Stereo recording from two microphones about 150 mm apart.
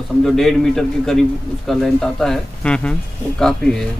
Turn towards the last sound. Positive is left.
turn(degrees=5)  # may be behind; listen again after turning